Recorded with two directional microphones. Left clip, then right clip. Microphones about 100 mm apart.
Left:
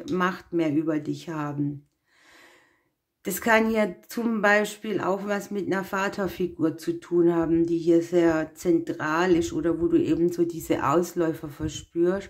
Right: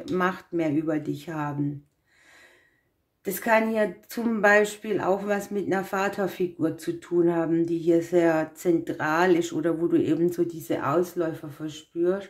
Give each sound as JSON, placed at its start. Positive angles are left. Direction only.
{"t": 0.1, "sound": "speech", "side_deg": 15}
{"t": 3.3, "sound": "a woman's voice", "side_deg": 35}
{"t": 4.1, "sound": "speech", "side_deg": 15}
{"t": 10.4, "sound": "speech", "side_deg": 30}